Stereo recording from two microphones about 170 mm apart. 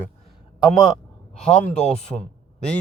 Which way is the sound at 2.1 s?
5° left (ahead or behind).